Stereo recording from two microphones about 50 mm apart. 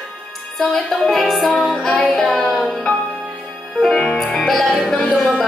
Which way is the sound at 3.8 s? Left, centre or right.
Centre.